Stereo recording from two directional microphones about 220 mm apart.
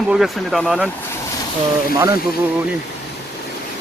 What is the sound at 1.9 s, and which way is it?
Speech, 15° right (ahead or behind).